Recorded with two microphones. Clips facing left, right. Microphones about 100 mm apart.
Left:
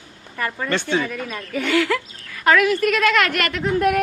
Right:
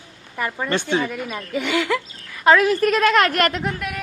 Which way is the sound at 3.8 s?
55° left (ahead or behind).